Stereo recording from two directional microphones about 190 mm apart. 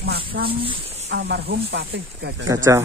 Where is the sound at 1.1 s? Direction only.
60° right (ahead or behind).